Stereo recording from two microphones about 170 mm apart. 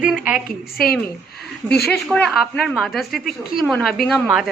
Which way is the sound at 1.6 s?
70° left (ahead or behind).